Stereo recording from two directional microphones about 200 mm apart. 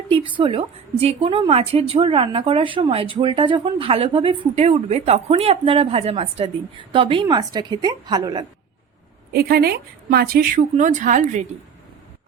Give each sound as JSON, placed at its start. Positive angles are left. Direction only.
{"t": 0.1, "sound": "a woman's voice", "side_deg": -25}
{"t": 9.3, "sound": "a woman's voice", "side_deg": -50}